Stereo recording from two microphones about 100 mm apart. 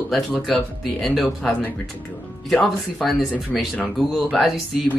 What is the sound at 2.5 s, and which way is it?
Speech, 5° left (ahead or behind).